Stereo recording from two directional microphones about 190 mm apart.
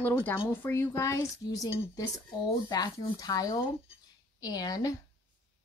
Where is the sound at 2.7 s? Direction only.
20° left (ahead or behind).